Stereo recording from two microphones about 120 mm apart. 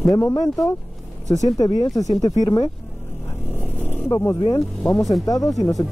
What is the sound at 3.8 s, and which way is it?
Roaring cats, 20° left (ahead or behind).